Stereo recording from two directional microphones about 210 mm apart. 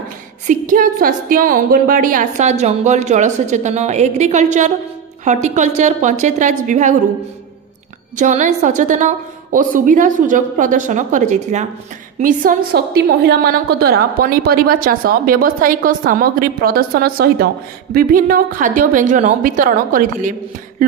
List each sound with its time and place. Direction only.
0.5 s a woman's voice: 40° right (ahead or behind)
8.2 s a woman's voice: 35° right (ahead or behind)